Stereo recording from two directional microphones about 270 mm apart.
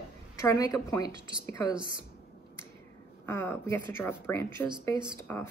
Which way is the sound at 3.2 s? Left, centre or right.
Centre.